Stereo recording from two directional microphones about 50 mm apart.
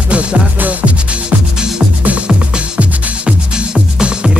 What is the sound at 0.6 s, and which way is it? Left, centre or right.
Music, right.